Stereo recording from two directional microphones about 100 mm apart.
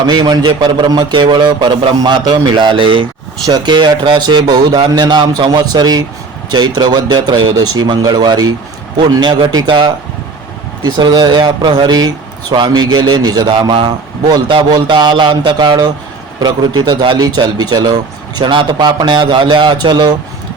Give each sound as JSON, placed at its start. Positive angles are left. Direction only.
{"t": 0.1, "sound": "speech", "side_deg": -45}
{"t": 2.0, "sound": "speech", "side_deg": -45}